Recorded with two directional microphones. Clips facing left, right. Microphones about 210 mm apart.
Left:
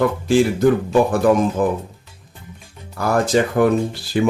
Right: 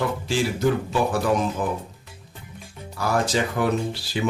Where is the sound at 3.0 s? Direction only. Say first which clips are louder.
Left 6 dB; 50° left (ahead or behind).